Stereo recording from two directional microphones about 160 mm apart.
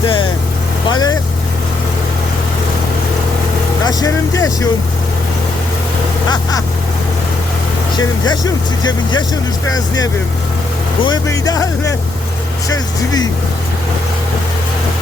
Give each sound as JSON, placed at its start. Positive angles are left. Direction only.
{"t": 0.0, "sound": "vehicle", "side_deg": 30}
{"t": 0.9, "sound": "speech", "side_deg": 25}
{"t": 3.8, "sound": "speech", "side_deg": 20}
{"t": 7.9, "sound": "speech", "side_deg": 25}